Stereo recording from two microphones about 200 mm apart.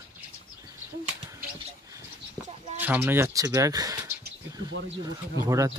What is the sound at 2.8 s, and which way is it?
Speech, 10° right (ahead or behind).